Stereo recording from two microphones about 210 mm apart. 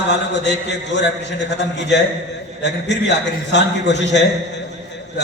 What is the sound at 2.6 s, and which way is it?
A man's voice, 55° left (ahead or behind).